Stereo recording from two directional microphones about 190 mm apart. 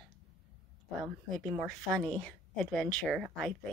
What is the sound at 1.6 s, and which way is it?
Speech, 5° left (ahead or behind).